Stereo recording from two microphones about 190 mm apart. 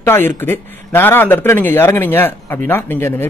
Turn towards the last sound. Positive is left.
turn(degrees=10)  # may be behind; listen again after turning